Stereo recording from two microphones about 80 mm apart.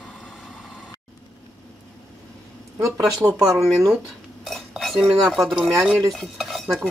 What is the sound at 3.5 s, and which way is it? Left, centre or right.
Cutlery, centre.